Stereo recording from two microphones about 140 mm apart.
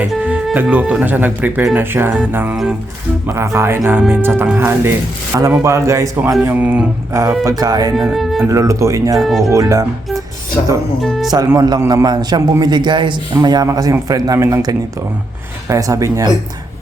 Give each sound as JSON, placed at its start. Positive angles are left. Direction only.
{"t": 0.1, "sound": "a man's voice", "side_deg": -10}
{"t": 7.9, "sound": "speech", "side_deg": 0}
{"t": 8.4, "sound": "a man's voice", "side_deg": -20}
{"t": 9.1, "sound": "speech", "side_deg": 0}
{"t": 9.5, "sound": "a man's voice", "side_deg": -25}
{"t": 11.0, "sound": "speech", "side_deg": 0}
{"t": 11.4, "sound": "a man's voice", "side_deg": -25}